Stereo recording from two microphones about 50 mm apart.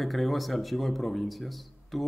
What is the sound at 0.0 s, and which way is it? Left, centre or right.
Speech, centre.